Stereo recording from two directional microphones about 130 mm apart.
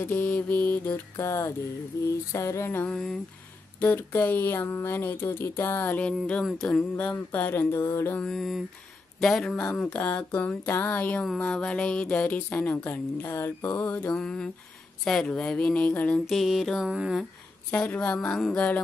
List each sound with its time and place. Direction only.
0.0 s speech: 15° left (ahead or behind)
1.1 s a sound: 20° left (ahead or behind)
2.9 s mantra: 5° left (ahead or behind)
3.8 s speech: 15° left (ahead or behind)
8.2 s mantra: 5° left (ahead or behind)
9.2 s speech: 5° left (ahead or behind)
16.3 s mantra: centre (ahead or behind)
17.2 s speech: 10° left (ahead or behind)